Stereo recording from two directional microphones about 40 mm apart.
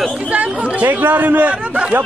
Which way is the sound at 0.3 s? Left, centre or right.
Right.